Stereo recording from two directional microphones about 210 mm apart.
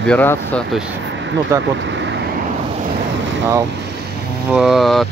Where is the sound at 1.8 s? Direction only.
60° right (ahead or behind).